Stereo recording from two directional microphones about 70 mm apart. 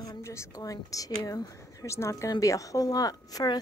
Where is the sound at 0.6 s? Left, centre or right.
Left.